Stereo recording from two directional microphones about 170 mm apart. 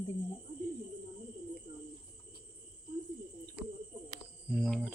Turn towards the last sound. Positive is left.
turn(degrees=0)  # may be behind; listen again after turning